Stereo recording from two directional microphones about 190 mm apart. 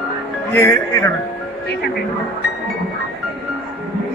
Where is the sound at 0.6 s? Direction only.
15° left (ahead or behind).